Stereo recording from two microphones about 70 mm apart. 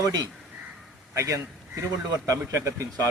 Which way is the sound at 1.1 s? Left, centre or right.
Right.